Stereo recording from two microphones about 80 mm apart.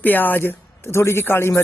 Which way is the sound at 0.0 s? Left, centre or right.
Left.